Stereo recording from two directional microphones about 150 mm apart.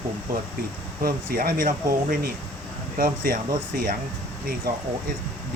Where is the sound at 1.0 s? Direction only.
75° right (ahead or behind).